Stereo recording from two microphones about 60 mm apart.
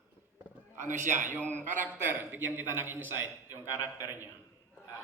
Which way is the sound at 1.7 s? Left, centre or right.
Right.